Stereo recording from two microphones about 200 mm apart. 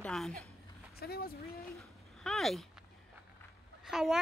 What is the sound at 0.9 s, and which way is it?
Speech, 50° left (ahead or behind).